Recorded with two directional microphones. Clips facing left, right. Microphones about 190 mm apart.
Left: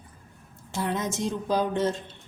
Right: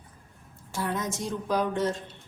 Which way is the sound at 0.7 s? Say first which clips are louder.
Left 2 dB; 20° left (ahead or behind).